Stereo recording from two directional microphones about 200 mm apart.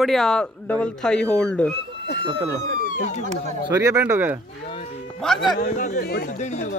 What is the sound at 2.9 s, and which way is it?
Speech, 35° left (ahead or behind).